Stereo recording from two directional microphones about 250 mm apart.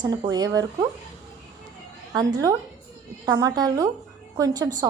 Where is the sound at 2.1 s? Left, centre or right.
Centre.